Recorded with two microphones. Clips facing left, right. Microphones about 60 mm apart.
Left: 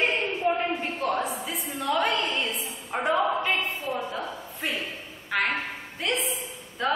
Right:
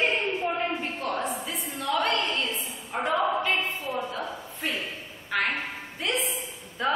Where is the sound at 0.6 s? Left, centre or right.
Centre.